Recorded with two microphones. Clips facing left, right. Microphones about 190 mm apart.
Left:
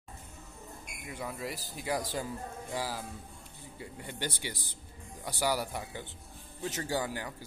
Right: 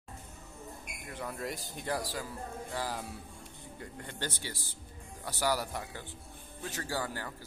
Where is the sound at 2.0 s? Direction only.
20° left (ahead or behind).